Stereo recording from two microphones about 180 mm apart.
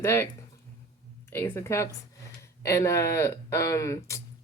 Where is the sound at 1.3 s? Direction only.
15° left (ahead or behind).